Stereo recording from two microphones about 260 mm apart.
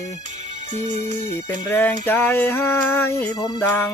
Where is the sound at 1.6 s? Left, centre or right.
Centre.